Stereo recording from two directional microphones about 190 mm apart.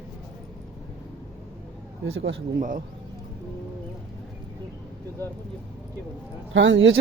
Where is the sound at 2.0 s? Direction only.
85° right.